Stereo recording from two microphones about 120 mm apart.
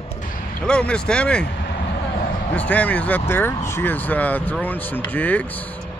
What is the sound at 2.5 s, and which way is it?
Speech, 10° left (ahead or behind).